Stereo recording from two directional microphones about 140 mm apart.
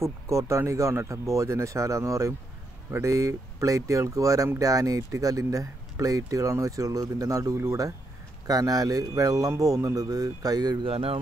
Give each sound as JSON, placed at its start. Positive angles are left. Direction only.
{"t": 0.0, "sound": "speech", "side_deg": -20}
{"t": 10.9, "sound": "speech", "side_deg": -40}